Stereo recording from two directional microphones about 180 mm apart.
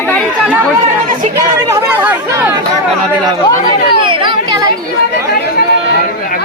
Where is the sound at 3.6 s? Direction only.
30° right (ahead or behind).